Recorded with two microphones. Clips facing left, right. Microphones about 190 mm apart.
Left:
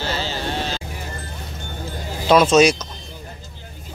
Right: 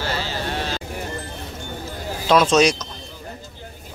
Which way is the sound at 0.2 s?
30° left (ahead or behind).